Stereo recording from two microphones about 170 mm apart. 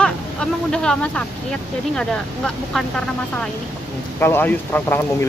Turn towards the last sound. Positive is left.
turn(degrees=10)  # may be behind; listen again after turning